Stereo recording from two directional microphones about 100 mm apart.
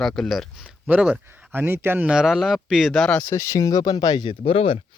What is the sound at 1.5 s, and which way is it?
Speech, 25° right (ahead or behind).